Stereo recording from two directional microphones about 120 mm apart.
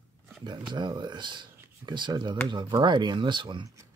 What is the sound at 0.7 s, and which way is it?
Speech, 40° right (ahead or behind).